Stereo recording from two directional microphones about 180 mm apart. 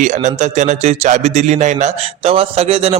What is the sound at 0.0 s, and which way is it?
A man's voice, 40° right (ahead or behind).